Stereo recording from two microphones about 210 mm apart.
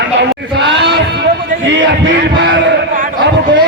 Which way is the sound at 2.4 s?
60° right (ahead or behind).